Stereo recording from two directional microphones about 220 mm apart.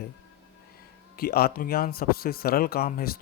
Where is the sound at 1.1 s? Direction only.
45° left (ahead or behind).